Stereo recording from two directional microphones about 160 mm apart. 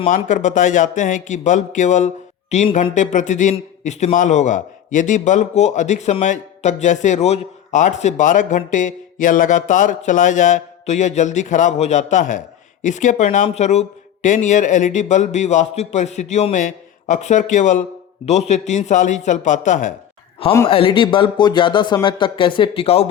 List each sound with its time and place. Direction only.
0.1 s a man's voice: 55° left (ahead or behind)
20.7 s speech: 35° left (ahead or behind)